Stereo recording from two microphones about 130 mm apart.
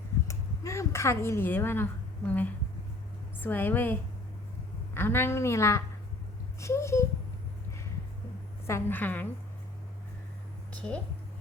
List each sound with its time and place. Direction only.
0.3 s a sound: 20° left (ahead or behind)
3.4 s a woman's voice: 15° left (ahead or behind)
4.9 s a woman's voice: 15° left (ahead or behind)
8.6 s a woman's voice: 20° left (ahead or behind)
10.7 s a woman's voice: 10° left (ahead or behind)